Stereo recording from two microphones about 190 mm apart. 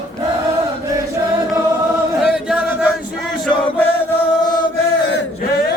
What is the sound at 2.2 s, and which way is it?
Chant, 5° right (ahead or behind).